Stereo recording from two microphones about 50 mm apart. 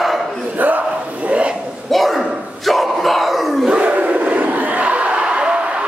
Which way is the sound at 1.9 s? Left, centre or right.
Centre.